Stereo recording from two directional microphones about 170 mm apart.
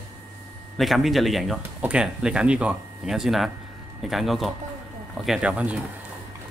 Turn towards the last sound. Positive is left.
turn(degrees=-5)  # may be behind; listen again after turning